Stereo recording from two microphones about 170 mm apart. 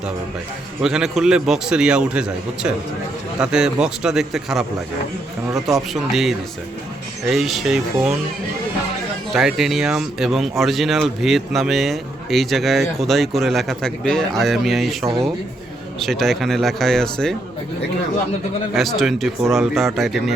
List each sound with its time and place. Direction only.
0.8 s a man's voice: 5° right (ahead or behind)
3.4 s a man's voice: 5° right (ahead or behind)
9.3 s a man's voice: centre (ahead or behind)
15.0 s speech: 20° right (ahead or behind)
16.0 s a man's voice: centre (ahead or behind)
18.7 s a man's voice: centre (ahead or behind)